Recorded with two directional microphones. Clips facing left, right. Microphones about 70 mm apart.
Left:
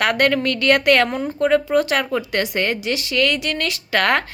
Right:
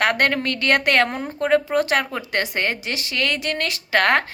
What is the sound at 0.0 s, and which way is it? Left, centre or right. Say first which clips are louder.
A woman's voice: left 2 dB; right.